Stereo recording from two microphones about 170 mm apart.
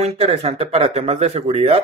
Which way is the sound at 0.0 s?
35° right (ahead or behind).